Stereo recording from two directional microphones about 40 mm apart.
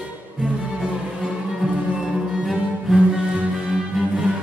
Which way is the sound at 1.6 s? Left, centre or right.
Centre.